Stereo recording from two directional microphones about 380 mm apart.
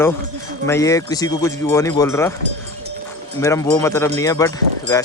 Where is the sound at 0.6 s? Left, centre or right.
Centre.